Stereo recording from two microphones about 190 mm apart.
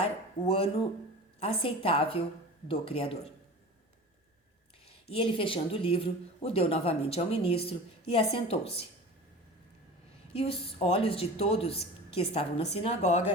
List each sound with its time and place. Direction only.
0.0 s speech: 30° left (ahead or behind)
4.9 s speech: 30° left (ahead or behind)
10.3 s speech: 30° left (ahead or behind)